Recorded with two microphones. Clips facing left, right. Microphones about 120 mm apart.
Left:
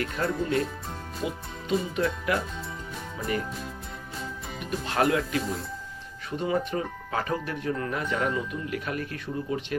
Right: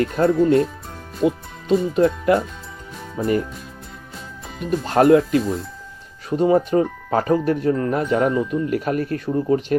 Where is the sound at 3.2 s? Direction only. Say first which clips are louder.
Right 11 dB; 40° right (ahead or behind).